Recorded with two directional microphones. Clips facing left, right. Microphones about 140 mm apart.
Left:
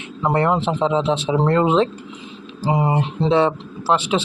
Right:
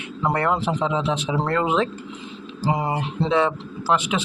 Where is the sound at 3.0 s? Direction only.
30° left (ahead or behind).